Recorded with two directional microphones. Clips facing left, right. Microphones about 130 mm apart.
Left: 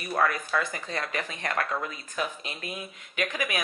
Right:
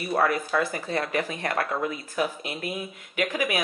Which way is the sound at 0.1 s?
30° right (ahead or behind).